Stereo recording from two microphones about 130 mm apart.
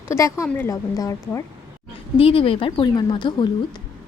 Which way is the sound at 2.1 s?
45° left (ahead or behind).